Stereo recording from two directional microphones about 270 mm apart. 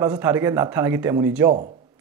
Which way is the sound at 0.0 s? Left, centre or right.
Centre.